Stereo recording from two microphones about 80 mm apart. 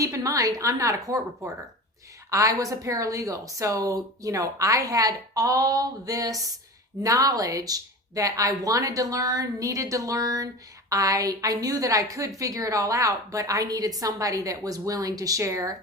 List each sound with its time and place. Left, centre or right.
0.0 s a woman's voice: right
2.3 s a woman's voice: right